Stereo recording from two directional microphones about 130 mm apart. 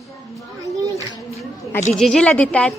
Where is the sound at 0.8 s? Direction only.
25° right (ahead or behind).